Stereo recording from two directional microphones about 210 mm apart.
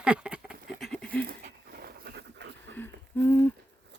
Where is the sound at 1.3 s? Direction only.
45° right (ahead or behind).